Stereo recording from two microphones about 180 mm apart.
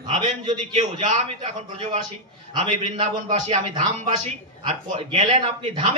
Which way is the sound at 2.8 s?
45° right (ahead or behind).